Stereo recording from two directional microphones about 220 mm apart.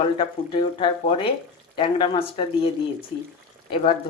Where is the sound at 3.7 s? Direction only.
30° left (ahead or behind).